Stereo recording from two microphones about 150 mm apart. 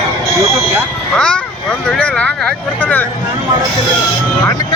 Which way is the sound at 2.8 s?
10° left (ahead or behind).